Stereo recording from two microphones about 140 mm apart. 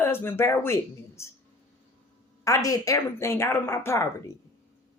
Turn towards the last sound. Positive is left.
turn(degrees=20)  # may be behind; listen again after turning